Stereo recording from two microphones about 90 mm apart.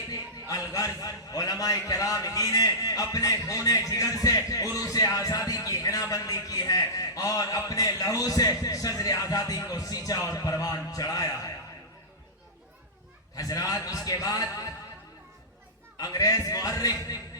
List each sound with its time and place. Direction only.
0.1 s a sound: 40° left (ahead or behind)
0.7 s a man's voice: 40° left (ahead or behind)
13.3 s a man's voice: 45° left (ahead or behind)
16.0 s a man's voice: 45° left (ahead or behind)